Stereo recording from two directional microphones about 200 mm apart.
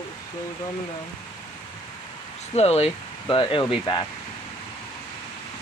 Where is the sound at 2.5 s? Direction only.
30° left (ahead or behind).